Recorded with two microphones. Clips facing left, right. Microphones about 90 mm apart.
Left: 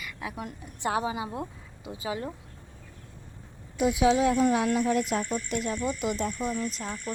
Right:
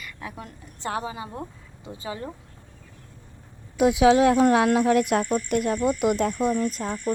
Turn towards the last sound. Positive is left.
turn(degrees=-30)  # may be behind; listen again after turning